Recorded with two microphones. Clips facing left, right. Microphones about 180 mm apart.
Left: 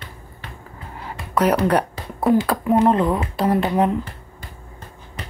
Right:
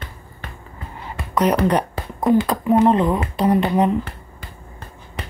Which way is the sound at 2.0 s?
55° right (ahead or behind).